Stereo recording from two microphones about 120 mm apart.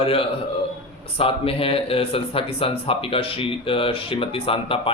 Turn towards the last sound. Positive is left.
turn(degrees=50)  # may be behind; listen again after turning